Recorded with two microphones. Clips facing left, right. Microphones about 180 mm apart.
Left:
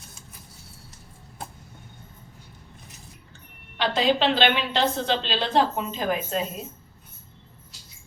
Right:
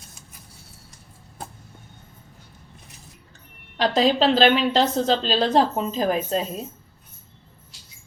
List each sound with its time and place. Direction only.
3.8 s a woman's voice: 40° right (ahead or behind)